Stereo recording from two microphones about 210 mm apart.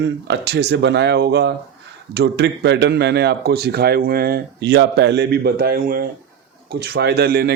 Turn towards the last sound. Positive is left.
turn(degrees=-50)  # may be behind; listen again after turning